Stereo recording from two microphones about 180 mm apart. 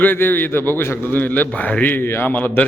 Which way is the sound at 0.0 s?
10° left (ahead or behind).